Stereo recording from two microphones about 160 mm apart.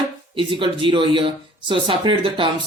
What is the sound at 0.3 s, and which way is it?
Speech, 30° right (ahead or behind).